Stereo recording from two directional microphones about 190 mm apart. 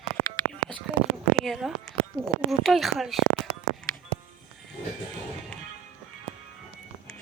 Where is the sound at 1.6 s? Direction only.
5° right (ahead or behind).